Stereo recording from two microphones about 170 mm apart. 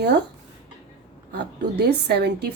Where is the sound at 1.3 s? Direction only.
75° right (ahead or behind).